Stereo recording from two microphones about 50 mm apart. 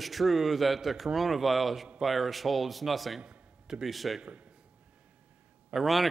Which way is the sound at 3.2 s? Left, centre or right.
Centre.